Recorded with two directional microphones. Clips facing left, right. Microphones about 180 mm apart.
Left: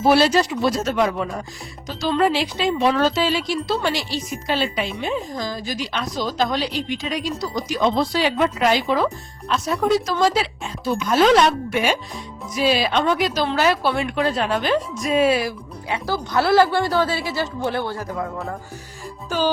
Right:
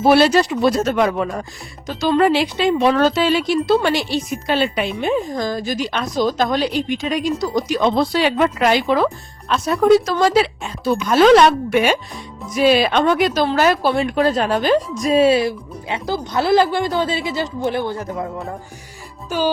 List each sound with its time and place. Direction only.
0.0 s speech: 60° right (ahead or behind); by 18.5 s 20° right (ahead or behind)